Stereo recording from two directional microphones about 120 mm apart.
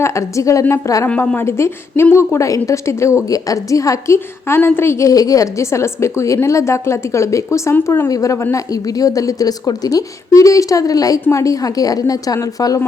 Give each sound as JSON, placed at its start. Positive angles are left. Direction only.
{"t": 0.0, "sound": "a woman's voice", "side_deg": 25}
{"t": 1.0, "sound": "a woman's voice", "side_deg": 10}